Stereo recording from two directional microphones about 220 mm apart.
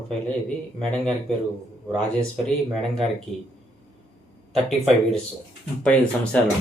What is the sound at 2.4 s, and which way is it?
Speech, centre (ahead or behind).